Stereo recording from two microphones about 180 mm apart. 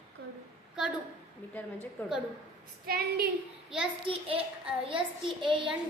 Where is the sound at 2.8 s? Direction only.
55° right (ahead or behind).